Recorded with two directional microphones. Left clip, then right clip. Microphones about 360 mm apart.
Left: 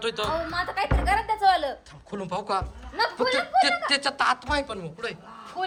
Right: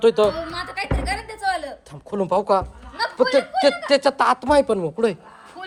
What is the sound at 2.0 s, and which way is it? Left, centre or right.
Speech, centre.